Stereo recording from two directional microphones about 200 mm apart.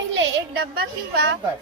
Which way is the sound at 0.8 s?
50° right (ahead or behind).